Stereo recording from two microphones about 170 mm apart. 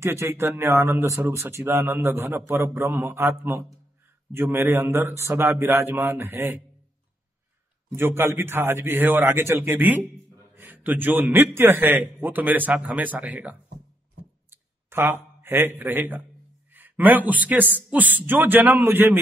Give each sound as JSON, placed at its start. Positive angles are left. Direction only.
{"t": 0.0, "sound": "a man's voice", "side_deg": -15}
{"t": 7.9, "sound": "a man's voice", "side_deg": -15}